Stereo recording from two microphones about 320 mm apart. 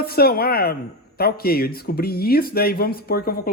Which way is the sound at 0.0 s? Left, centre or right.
Left.